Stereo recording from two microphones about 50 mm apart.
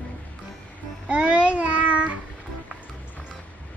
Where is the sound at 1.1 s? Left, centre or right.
Right.